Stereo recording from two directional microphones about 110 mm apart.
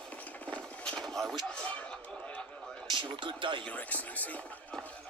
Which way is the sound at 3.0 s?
45° right (ahead or behind).